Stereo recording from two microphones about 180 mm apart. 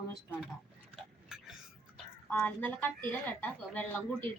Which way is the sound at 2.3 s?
10° left (ahead or behind).